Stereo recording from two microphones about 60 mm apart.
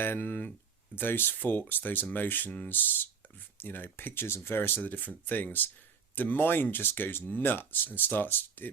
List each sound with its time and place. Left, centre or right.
0.0 s speech: left
4.8 s speech: left